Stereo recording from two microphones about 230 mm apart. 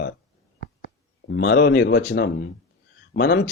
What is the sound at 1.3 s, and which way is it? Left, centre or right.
Speech, left.